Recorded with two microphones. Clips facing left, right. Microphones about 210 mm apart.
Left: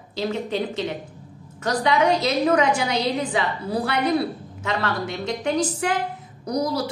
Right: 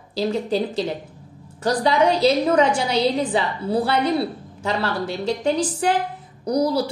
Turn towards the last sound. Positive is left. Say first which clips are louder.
# right 4 dB
turn(degrees=-30)  # may be behind; listen again after turning